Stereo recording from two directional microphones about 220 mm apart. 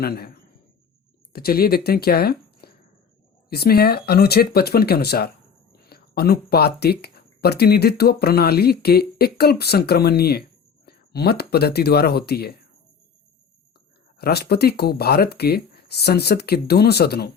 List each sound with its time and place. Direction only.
1.3 s speech: 45° left (ahead or behind)
14.2 s speech: 45° left (ahead or behind)